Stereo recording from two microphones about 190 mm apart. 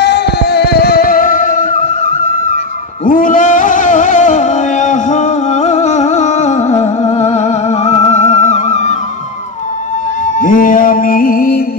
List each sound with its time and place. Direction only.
0.0 s music: 60° left (ahead or behind); by 1.8 s 45° left (ahead or behind)
3.1 s music: 45° left (ahead or behind)
10.4 s music: 45° left (ahead or behind)